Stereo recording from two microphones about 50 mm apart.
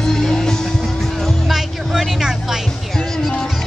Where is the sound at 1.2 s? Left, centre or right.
Centre.